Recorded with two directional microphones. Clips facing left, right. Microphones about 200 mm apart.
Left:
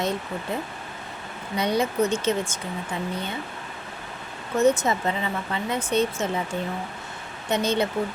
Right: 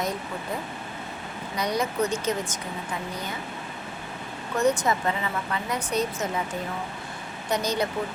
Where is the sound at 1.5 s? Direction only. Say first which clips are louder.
Left 3 dB; 25° left (ahead or behind).